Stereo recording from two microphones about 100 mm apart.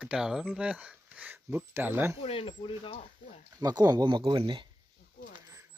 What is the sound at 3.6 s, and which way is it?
Speech, 40° right (ahead or behind).